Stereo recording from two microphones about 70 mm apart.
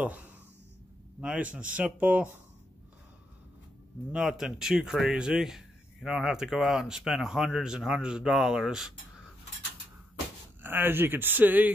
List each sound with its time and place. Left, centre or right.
0.0 s speech: right
4.1 s speech: centre
10.6 s speech: right